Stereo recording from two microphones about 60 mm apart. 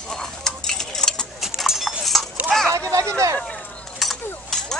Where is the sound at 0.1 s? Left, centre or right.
Centre.